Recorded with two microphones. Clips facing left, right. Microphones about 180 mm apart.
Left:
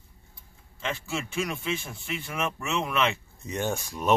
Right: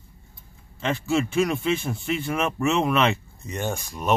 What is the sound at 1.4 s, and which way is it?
A man's voice, 70° right (ahead or behind).